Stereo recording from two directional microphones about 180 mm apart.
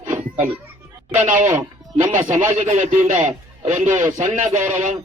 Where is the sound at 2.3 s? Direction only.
40° right (ahead or behind).